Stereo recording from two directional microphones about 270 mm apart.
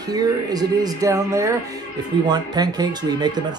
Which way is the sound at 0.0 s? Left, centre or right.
Centre.